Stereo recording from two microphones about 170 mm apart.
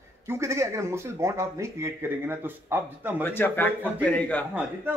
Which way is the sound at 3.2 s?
10° left (ahead or behind).